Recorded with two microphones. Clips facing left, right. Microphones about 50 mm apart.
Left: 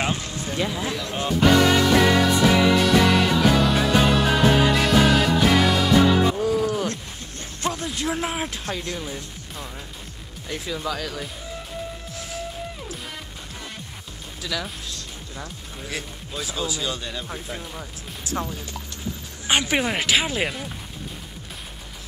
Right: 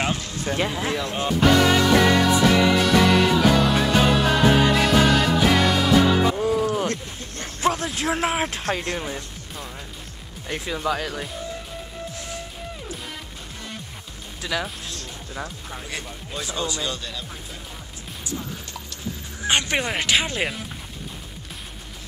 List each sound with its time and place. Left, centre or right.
0.6 s speech: right
1.1 s music: centre
6.4 s music: centre
8.1 s speech: right
8.6 s speech: right
10.7 s speech: right
14.4 s speech: right
15.9 s speech: centre
17.0 s speech: centre
19.4 s speech: centre